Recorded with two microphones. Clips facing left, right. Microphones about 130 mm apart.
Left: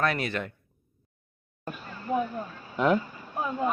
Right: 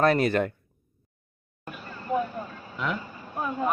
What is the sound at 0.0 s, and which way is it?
Speech, 40° right (ahead or behind).